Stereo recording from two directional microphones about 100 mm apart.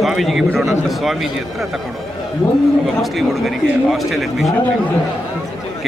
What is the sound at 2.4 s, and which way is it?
Speech, 15° left (ahead or behind).